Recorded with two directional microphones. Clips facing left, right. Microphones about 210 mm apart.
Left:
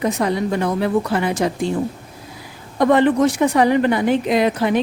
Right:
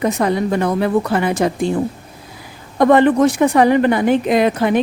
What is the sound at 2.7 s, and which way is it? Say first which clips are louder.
A woman's voice: right 3 dB; 50° right (ahead or behind).